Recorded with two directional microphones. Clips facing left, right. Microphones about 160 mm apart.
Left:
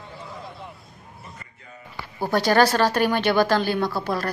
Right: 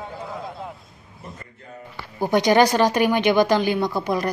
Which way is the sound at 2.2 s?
15° right (ahead or behind).